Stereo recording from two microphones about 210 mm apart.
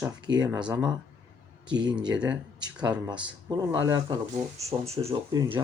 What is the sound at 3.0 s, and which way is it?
Speech, 20° right (ahead or behind).